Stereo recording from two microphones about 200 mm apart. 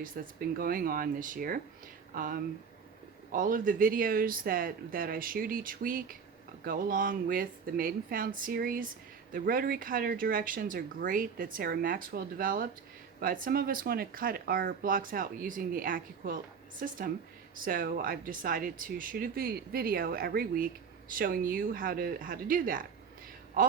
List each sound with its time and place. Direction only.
0.0 s speech: 45° right (ahead or behind)